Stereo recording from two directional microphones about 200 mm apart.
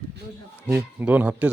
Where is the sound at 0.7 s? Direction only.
10° right (ahead or behind).